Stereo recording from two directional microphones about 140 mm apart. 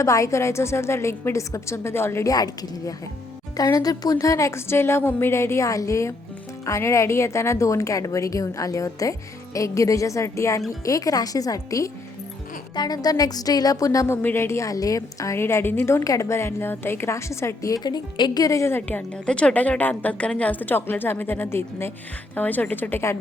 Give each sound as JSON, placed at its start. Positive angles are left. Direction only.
{"t": 0.0, "sound": "a woman's voice", "side_deg": 20}